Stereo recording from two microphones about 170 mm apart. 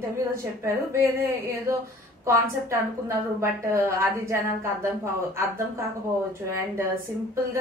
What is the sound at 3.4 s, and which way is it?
A woman's voice, 15° right (ahead or behind).